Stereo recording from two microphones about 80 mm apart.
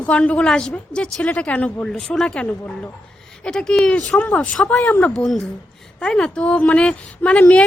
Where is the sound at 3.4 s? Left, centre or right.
Centre.